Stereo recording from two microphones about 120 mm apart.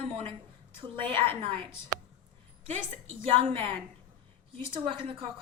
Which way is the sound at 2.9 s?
50° right (ahead or behind).